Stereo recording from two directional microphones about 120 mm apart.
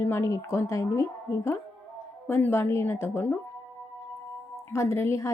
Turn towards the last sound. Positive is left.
turn(degrees=25)  # may be behind; listen again after turning